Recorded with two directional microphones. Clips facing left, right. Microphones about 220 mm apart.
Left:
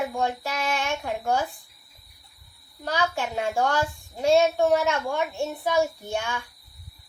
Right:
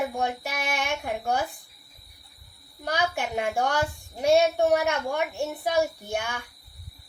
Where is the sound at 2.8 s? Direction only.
15° right (ahead or behind).